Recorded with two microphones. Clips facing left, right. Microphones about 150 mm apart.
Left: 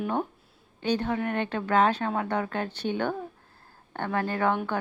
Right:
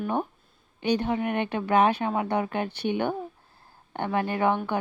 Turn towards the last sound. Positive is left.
turn(degrees=-15)  # may be behind; listen again after turning